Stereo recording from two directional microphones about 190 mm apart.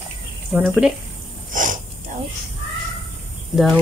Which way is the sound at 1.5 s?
45° right (ahead or behind).